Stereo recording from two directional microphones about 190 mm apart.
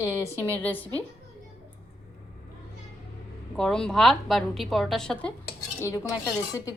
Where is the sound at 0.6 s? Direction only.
10° left (ahead or behind).